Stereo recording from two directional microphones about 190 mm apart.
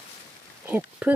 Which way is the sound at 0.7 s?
10° right (ahead or behind).